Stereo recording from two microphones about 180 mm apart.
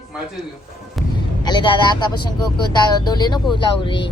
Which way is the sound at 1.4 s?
25° left (ahead or behind).